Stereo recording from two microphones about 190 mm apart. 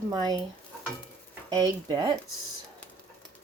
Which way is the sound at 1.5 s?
20° right (ahead or behind).